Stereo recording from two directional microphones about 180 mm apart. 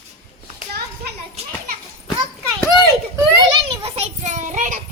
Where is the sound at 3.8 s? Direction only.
40° right (ahead or behind).